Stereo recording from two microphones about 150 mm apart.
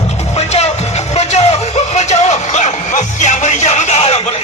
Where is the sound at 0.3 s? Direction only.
45° left (ahead or behind).